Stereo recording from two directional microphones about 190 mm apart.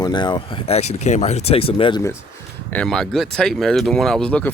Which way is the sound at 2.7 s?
5° left (ahead or behind).